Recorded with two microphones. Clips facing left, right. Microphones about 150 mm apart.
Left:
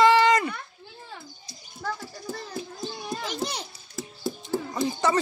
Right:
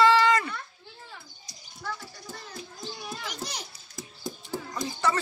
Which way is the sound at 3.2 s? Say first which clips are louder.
Left 8 dB; 25° left (ahead or behind).